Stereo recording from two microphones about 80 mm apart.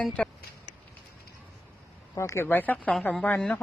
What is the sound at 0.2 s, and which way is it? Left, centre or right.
Speech, centre.